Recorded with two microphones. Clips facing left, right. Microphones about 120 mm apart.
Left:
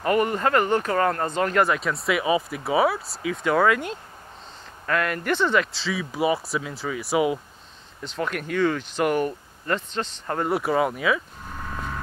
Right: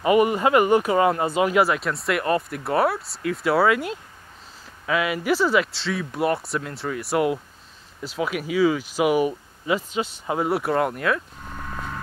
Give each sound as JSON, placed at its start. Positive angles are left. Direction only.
{"t": 0.0, "sound": "speech", "side_deg": -5}